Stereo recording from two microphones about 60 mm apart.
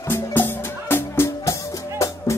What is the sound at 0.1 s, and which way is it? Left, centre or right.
Music, left.